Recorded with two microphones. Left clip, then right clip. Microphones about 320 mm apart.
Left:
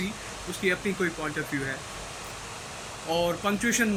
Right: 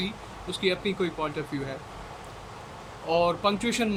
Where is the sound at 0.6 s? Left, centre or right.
Centre.